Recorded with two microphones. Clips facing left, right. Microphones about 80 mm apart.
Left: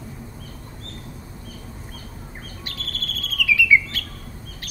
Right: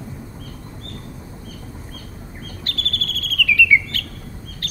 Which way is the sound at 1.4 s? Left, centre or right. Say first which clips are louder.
Right 2 dB; left.